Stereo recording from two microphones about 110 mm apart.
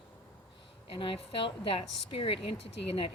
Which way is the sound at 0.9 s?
55° left (ahead or behind).